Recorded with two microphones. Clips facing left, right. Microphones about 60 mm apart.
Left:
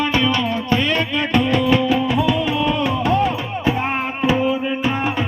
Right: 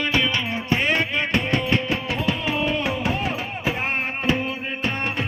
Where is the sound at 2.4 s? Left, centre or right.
Centre.